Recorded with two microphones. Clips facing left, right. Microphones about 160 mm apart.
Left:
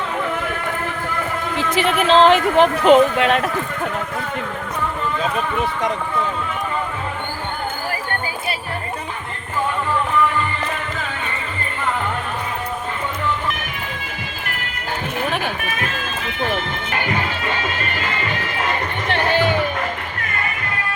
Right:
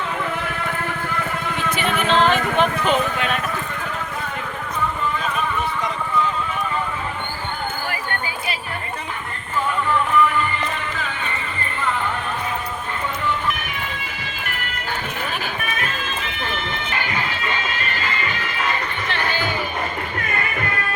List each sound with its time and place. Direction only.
1.5 s speech: 90° left
19.1 s music: 70° left (ahead or behind)